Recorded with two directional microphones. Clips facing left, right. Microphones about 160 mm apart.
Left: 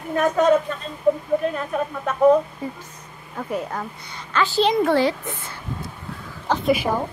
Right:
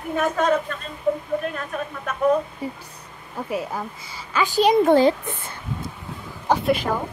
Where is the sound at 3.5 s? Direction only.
5° right (ahead or behind).